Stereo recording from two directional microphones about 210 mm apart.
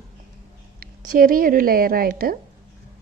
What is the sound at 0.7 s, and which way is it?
A woman's voice, 45° right (ahead or behind).